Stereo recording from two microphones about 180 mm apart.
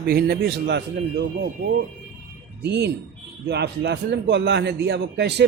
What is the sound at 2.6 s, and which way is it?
A man's voice, 70° right (ahead or behind).